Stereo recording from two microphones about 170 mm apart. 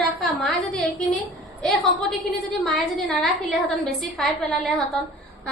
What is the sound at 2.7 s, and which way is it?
Speech, centre (ahead or behind).